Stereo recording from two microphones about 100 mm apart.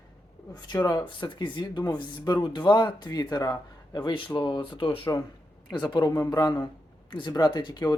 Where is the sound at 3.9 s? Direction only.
55° left (ahead or behind).